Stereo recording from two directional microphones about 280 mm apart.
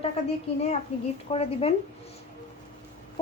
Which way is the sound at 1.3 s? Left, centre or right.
Left.